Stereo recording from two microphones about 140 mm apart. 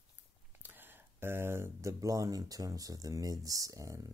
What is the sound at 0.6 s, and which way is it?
Speech, 15° right (ahead or behind).